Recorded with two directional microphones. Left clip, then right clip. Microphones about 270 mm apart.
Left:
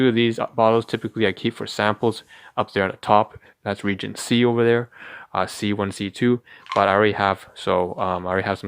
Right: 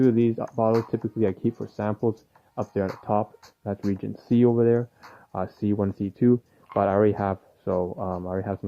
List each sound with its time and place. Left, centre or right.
0.0 s speech: centre
3.1 s speech: centre